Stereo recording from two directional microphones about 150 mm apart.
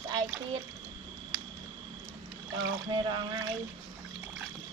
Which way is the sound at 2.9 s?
30° right (ahead or behind).